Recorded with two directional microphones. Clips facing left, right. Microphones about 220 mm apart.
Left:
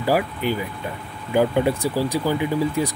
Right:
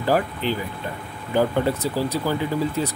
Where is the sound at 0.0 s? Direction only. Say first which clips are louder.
Left 1 dB; 10° left (ahead or behind).